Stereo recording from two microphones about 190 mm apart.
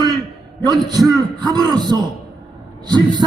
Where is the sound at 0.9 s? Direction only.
20° right (ahead or behind).